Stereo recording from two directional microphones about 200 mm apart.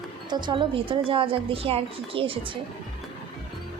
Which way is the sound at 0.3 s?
20° right (ahead or behind).